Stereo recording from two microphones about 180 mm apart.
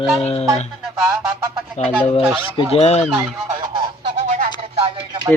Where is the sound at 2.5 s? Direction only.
35° left (ahead or behind).